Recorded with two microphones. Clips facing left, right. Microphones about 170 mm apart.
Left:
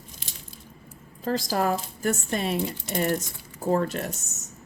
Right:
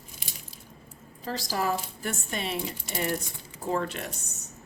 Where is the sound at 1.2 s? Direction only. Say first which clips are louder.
Left 5 dB; 50° left (ahead or behind).